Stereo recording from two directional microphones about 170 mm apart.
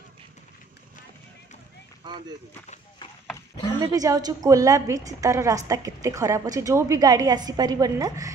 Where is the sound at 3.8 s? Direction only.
20° right (ahead or behind).